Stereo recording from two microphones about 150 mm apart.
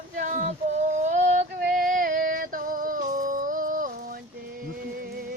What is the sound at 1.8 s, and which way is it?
Music, 70° right (ahead or behind).